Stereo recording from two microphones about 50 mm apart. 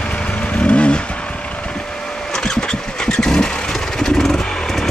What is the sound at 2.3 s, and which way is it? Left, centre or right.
Vehicle, centre.